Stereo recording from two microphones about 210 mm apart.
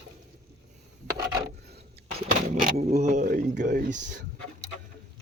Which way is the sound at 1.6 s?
50° right (ahead or behind).